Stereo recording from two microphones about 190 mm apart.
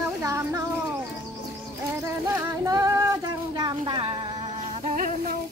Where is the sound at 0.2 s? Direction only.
15° right (ahead or behind).